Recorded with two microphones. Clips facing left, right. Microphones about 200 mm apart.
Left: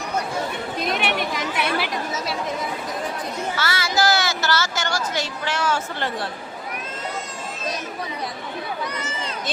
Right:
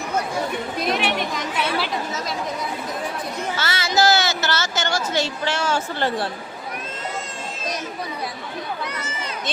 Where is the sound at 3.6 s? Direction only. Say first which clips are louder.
Right 2 dB; 25° right (ahead or behind).